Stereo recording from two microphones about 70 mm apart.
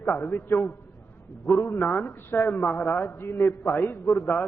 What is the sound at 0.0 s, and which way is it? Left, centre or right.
A man's voice, left.